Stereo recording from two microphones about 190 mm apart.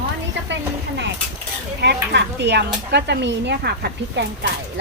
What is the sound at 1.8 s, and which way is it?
Speech, 60° right (ahead or behind).